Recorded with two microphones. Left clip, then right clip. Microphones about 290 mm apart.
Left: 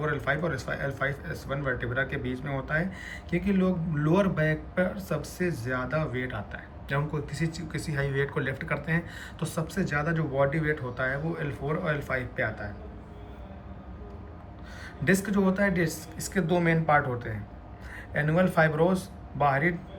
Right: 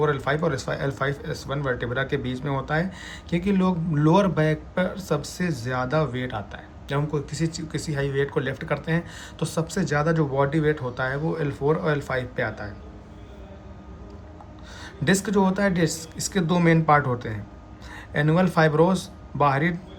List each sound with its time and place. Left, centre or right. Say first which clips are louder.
0.0 s speech: right 5 dB; centre
15.0 s speech: right 4 dB; centre